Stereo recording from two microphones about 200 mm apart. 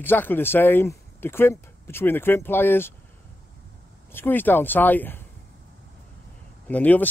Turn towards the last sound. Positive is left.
turn(degrees=10)  # may be behind; listen again after turning